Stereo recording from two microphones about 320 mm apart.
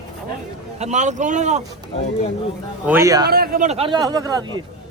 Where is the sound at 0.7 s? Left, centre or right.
Right.